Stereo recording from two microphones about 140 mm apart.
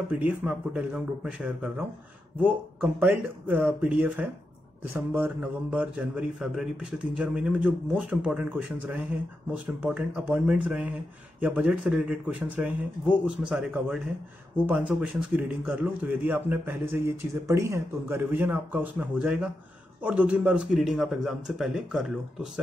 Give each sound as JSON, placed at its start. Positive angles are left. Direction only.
{"t": 0.1, "sound": "a man's voice", "side_deg": -5}